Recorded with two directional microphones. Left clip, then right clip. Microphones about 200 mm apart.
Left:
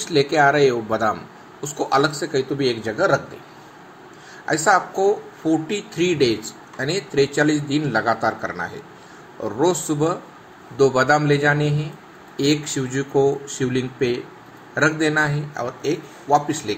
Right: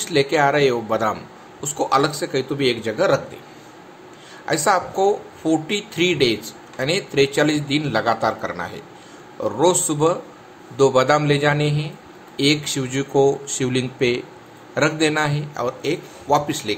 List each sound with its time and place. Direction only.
0.0 s speech: 10° right (ahead or behind)
4.5 s speech: 15° right (ahead or behind)